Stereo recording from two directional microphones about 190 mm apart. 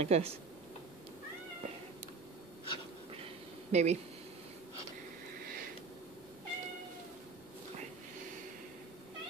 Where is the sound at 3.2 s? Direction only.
35° right (ahead or behind).